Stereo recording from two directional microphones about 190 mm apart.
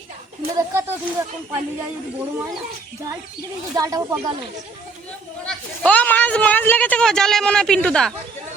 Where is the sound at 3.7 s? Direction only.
20° right (ahead or behind).